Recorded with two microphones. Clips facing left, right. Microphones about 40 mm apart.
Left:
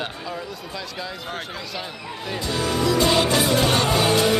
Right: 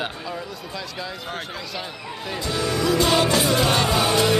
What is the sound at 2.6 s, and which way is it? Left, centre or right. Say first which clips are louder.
Music: even; left.